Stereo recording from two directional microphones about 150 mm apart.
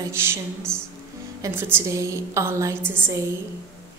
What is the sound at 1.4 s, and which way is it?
A woman's voice, 15° right (ahead or behind).